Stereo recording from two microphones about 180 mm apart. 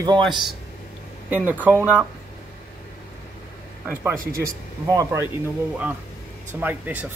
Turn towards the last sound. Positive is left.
turn(degrees=-10)  # may be behind; listen again after turning